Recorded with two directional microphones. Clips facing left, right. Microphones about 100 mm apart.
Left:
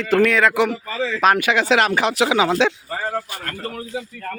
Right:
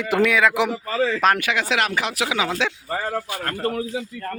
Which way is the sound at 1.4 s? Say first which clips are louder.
Left 5 dB; 25° left (ahead or behind).